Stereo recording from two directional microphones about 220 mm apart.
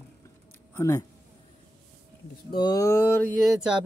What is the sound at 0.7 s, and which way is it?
Speech, 15° left (ahead or behind).